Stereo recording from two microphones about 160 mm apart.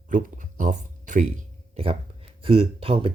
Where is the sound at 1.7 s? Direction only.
35° right (ahead or behind).